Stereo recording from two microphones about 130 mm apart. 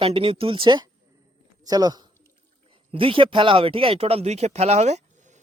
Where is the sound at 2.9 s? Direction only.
45° right (ahead or behind).